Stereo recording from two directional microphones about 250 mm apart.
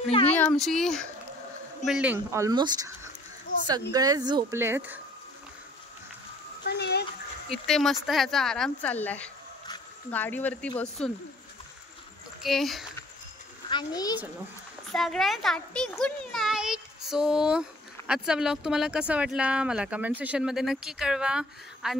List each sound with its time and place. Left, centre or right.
0.3 s a child's voice: centre
6.6 s a sound: left
7.6 s speech: centre
12.4 s a child's voice: centre
13.7 s a child's voice: centre
14.9 s a child's voice: centre